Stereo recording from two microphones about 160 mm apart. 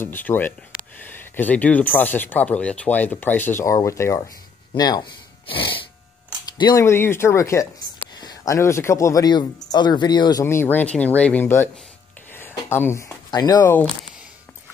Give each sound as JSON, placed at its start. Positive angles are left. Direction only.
{"t": 0.0, "sound": "speech", "side_deg": 15}
{"t": 10.4, "sound": "speech", "side_deg": 15}
{"t": 12.3, "sound": "a sound", "side_deg": 15}